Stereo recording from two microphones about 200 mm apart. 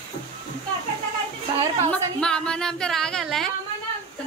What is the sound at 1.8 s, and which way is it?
Speech, 5° left (ahead or behind).